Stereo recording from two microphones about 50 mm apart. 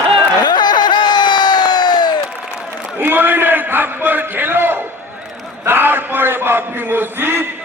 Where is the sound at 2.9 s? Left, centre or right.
Right.